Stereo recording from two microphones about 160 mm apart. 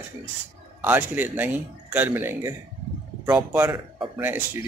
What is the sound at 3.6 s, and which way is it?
Speech, 25° right (ahead or behind).